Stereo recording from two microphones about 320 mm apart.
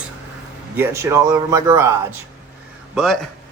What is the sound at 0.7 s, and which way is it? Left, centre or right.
Speech, centre.